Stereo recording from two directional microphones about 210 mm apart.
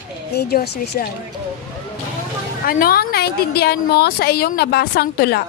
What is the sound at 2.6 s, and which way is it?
A woman's voice, 45° left (ahead or behind).